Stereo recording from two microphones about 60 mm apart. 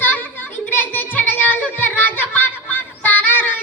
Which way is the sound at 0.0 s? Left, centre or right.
Left.